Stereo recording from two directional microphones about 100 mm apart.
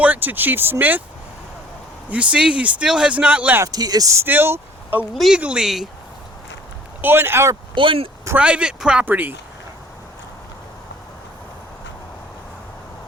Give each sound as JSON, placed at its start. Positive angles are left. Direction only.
{"t": 0.0, "sound": "speech", "side_deg": -15}
{"t": 2.0, "sound": "speech", "side_deg": -10}
{"t": 3.7, "sound": "speech", "side_deg": -40}
{"t": 4.3, "sound": "speech", "side_deg": -20}
{"t": 5.1, "sound": "speech", "side_deg": 0}
{"t": 7.0, "sound": "speech", "side_deg": -20}
{"t": 7.8, "sound": "speech", "side_deg": -60}
{"t": 8.4, "sound": "speech", "side_deg": -10}